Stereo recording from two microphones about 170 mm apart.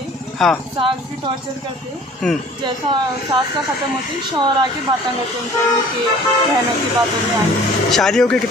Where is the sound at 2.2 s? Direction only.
5° left (ahead or behind).